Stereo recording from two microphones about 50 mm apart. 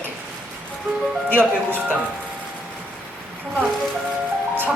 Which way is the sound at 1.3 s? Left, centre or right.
Right.